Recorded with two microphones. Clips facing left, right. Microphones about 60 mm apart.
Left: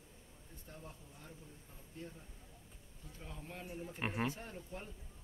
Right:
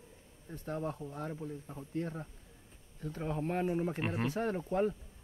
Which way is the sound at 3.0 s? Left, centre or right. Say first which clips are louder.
Right 16 dB; right.